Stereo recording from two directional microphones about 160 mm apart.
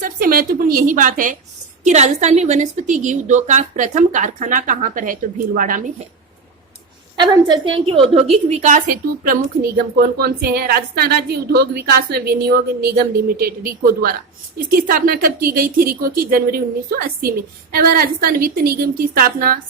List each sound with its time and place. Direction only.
0.0 s a woman's voice: 65° right (ahead or behind)
7.2 s a woman's voice: 30° right (ahead or behind); by 9.4 s 60° right (ahead or behind)
9.7 s speech: 75° right (ahead or behind)